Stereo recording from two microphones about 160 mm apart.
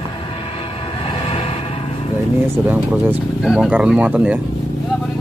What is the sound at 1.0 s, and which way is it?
Music, 35° left (ahead or behind).